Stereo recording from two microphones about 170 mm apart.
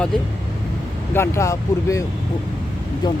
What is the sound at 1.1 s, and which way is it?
Speech, 15° left (ahead or behind).